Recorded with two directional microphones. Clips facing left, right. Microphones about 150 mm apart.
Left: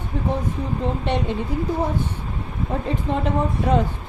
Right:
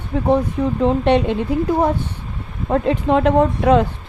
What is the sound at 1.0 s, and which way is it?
Speech, 75° right (ahead or behind).